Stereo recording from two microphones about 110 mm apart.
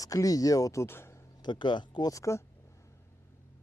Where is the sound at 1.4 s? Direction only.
45° left (ahead or behind).